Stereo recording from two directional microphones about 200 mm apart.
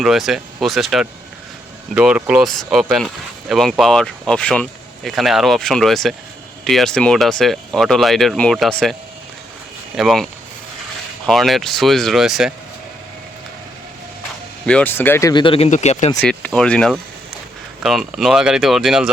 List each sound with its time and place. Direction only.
0.0 s speech: centre (ahead or behind)
11.3 s speech: centre (ahead or behind)
14.7 s speech: 5° left (ahead or behind); by 16.1 s 35° left (ahead or behind)
16.4 s speech: 5° left (ahead or behind)